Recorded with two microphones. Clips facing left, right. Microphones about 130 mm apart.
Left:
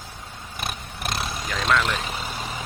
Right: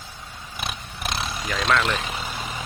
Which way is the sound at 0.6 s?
45° left (ahead or behind).